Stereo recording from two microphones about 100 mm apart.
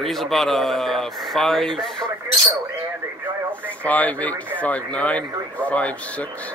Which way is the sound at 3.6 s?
15° left (ahead or behind).